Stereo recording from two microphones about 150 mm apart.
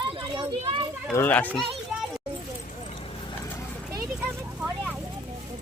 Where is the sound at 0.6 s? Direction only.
35° right (ahead or behind).